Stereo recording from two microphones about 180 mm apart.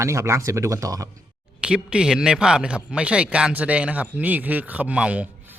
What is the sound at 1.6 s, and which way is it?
Speech, 5° right (ahead or behind).